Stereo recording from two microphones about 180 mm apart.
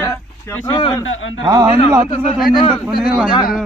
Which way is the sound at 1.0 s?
90° left.